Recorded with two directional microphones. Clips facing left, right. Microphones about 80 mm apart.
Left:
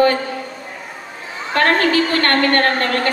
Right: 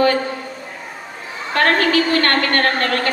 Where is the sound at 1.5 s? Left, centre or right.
Left.